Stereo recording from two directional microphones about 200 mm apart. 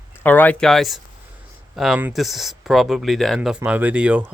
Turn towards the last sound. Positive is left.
turn(degrees=-5)  # may be behind; listen again after turning